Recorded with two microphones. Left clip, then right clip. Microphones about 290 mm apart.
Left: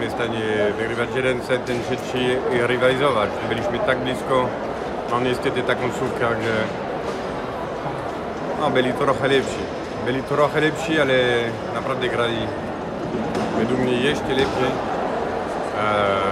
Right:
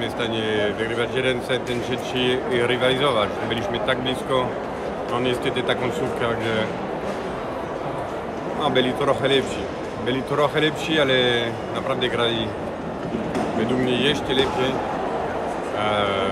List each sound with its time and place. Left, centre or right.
0.2 s speech: centre
8.6 s speech: centre
13.8 s speech: centre
15.8 s speech: centre